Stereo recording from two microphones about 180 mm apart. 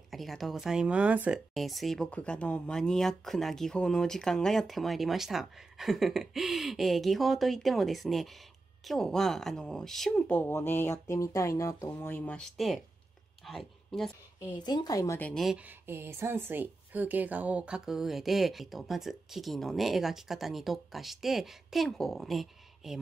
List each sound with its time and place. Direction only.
0.1 s a woman's voice: centre (ahead or behind)
14.4 s a woman's voice: 25° left (ahead or behind); by 15.6 s centre (ahead or behind)
15.9 s speech: 15° right (ahead or behind)